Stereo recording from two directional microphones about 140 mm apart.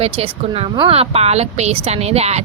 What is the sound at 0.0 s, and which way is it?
A woman's voice, 45° right (ahead or behind).